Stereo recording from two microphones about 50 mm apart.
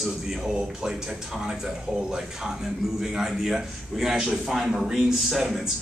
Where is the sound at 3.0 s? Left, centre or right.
Centre.